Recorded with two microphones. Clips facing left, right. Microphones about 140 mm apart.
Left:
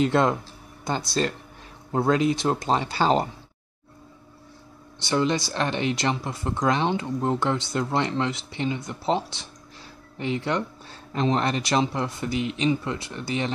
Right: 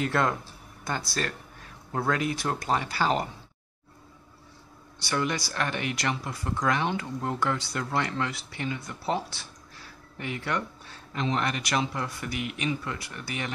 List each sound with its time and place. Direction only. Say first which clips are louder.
0.0 s speech: left 5 dB; 20° left (ahead or behind)
5.0 s speech: left 6 dB; 25° left (ahead or behind)